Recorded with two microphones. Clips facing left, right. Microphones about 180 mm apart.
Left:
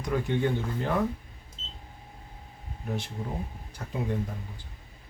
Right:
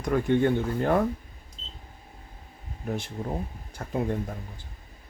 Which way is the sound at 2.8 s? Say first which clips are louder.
Right 3 dB; 50° right (ahead or behind).